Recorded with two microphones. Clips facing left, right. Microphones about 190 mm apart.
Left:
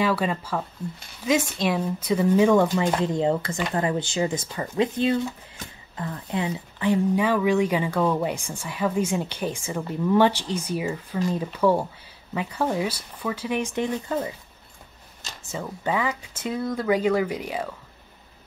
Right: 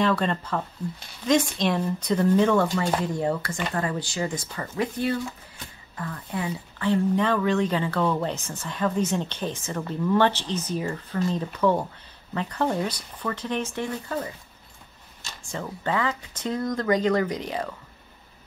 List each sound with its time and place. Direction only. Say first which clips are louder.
0.0 s speech: even; 5° left (ahead or behind)
15.5 s speech: left 1 dB; 10° left (ahead or behind)